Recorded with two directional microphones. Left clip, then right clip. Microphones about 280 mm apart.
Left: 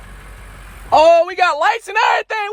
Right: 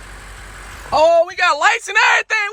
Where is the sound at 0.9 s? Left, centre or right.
Left.